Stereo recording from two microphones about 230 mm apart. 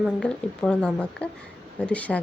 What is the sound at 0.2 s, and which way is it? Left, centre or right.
A woman's voice, centre.